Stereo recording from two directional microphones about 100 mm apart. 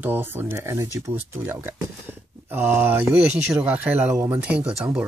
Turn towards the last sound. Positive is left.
turn(degrees=-10)  # may be behind; listen again after turning